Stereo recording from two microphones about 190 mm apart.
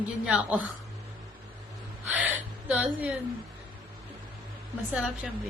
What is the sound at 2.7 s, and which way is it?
Speech, 5° right (ahead or behind).